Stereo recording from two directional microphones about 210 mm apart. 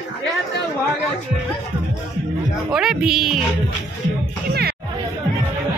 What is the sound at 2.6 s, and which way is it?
Speech, centre (ahead or behind).